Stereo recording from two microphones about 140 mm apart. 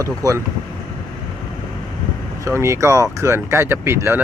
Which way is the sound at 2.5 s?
20° right (ahead or behind).